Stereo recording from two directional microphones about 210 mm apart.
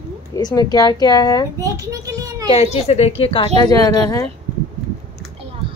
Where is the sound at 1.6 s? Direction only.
15° right (ahead or behind).